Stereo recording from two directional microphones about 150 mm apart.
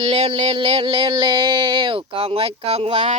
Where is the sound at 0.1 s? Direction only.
45° right (ahead or behind).